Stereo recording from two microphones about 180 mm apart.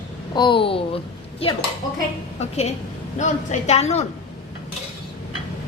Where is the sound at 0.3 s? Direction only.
25° left (ahead or behind).